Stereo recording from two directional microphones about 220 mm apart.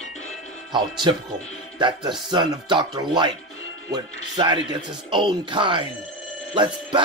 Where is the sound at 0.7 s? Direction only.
20° right (ahead or behind).